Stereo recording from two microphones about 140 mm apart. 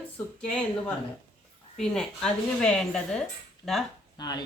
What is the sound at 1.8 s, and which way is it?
Speech, 5° left (ahead or behind).